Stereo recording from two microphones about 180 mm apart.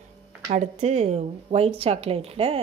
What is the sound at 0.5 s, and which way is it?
Speech, 35° right (ahead or behind).